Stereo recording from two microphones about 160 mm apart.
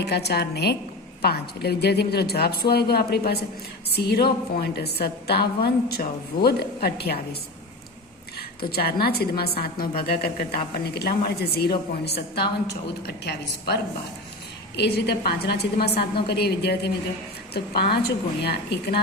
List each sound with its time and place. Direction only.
0.0 s a woman's voice: 90° left
4.6 s a woman's voice: 90° left
8.4 s a woman's voice: 75° left (ahead or behind)
10.8 s a woman's voice: 85° left
14.8 s a woman's voice: 85° left